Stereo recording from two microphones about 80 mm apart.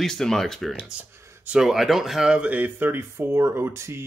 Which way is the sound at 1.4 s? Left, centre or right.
Centre.